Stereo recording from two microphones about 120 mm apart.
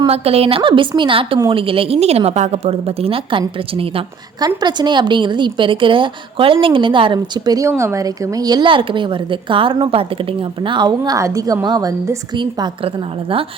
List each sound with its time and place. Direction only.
0.1 s a woman's voice: 55° right (ahead or behind)
4.4 s a woman's voice: 35° right (ahead or behind)
7.7 s a woman's voice: 20° right (ahead or behind); by 12.9 s 40° right (ahead or behind)